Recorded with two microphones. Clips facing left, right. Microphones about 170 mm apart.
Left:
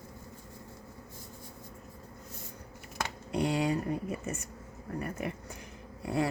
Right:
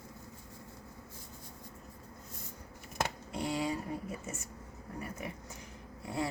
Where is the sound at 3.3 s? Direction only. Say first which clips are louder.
Left 8 dB; 65° left (ahead or behind).